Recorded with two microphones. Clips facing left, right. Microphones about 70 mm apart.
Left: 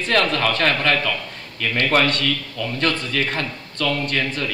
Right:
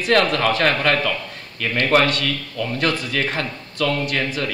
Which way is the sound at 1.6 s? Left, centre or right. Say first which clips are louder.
Even; centre.